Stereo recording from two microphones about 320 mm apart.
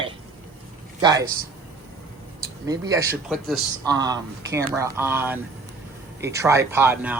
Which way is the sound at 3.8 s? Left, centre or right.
Centre.